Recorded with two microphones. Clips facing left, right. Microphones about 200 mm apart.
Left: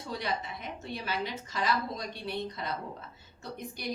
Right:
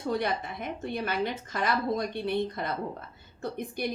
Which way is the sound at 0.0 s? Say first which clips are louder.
Right 6 dB; 55° right (ahead or behind).